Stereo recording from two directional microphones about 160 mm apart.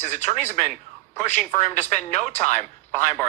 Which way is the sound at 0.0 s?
45° left (ahead or behind).